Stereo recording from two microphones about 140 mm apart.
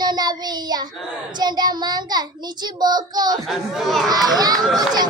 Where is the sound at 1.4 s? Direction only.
30° right (ahead or behind).